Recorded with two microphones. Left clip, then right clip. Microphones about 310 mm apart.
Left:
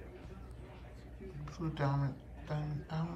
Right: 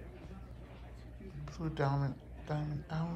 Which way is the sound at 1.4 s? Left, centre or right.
Centre.